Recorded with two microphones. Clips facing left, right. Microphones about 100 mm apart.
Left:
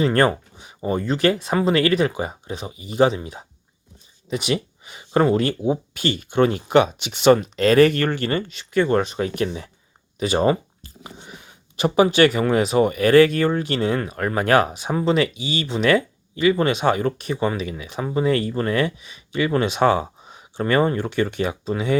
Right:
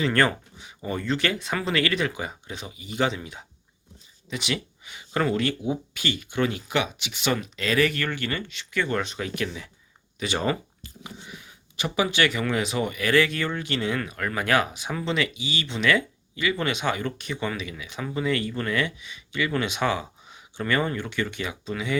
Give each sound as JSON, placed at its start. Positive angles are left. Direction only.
{"t": 0.0, "sound": "speech", "side_deg": 30}
{"t": 4.3, "sound": "speech", "side_deg": 30}
{"t": 14.8, "sound": "speech", "side_deg": 30}
{"t": 15.4, "sound": "speech", "side_deg": 45}
{"t": 21.1, "sound": "speech", "side_deg": 50}